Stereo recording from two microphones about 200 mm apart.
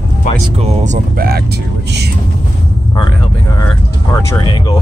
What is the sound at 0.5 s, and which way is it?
Speech, 35° right (ahead or behind).